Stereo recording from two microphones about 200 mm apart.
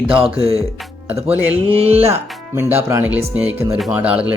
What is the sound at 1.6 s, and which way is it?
Music, 30° right (ahead or behind).